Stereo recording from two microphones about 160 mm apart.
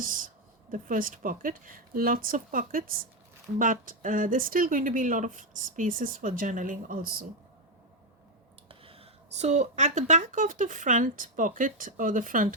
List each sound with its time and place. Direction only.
0.7 s speech: 60° right (ahead or behind)
8.8 s speech: 35° right (ahead or behind); by 12.5 s 55° right (ahead or behind)